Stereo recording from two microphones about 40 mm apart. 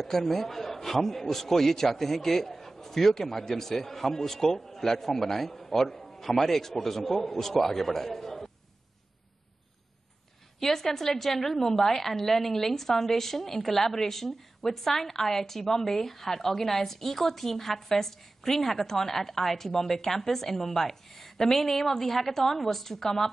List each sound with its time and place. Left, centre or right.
0.0 s a woman's voice: centre
10.6 s a woman's voice: centre